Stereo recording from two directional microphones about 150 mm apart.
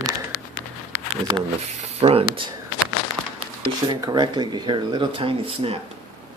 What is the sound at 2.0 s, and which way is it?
Speech, 40° right (ahead or behind).